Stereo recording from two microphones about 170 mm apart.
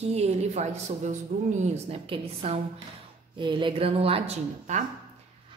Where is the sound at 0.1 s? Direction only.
40° right (ahead or behind).